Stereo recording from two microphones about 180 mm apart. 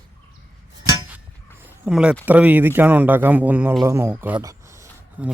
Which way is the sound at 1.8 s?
5° right (ahead or behind).